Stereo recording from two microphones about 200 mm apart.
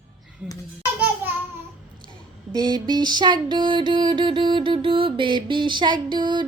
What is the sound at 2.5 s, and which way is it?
Music, 20° right (ahead or behind).